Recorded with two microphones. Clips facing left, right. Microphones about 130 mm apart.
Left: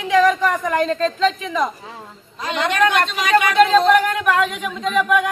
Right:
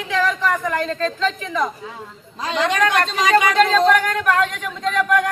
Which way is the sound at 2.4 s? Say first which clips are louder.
Even; 30° right (ahead or behind).